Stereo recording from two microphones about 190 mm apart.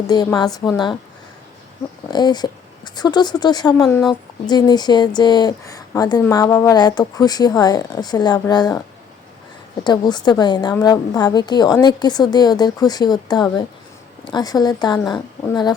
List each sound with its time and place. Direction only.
0.1 s speech: 20° left (ahead or behind)
2.0 s speech: 20° left (ahead or behind)
9.8 s speech: 20° left (ahead or behind)